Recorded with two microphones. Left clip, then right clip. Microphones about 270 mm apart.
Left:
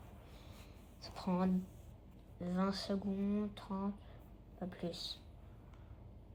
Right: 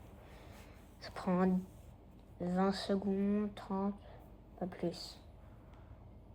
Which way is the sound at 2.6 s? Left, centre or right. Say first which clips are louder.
Right 4 dB; right.